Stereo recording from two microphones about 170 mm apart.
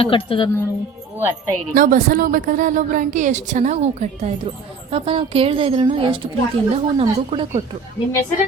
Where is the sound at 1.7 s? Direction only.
55° right (ahead or behind); by 7.6 s 30° right (ahead or behind).